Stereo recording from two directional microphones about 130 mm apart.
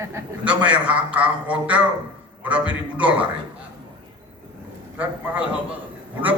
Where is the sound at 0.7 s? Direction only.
10° right (ahead or behind).